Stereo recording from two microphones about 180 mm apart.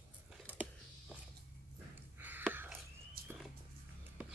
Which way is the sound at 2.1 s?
10° right (ahead or behind).